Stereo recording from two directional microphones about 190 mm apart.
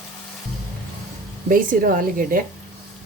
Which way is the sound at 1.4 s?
45° right (ahead or behind).